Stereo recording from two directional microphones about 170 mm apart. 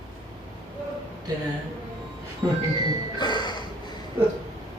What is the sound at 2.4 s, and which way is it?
Speech, 15° right (ahead or behind).